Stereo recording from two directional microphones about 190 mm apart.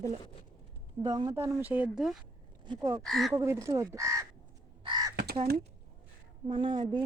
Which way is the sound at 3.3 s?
15° right (ahead or behind).